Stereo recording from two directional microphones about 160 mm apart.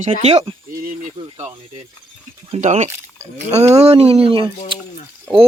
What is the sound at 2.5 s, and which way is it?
Speech, 45° right (ahead or behind).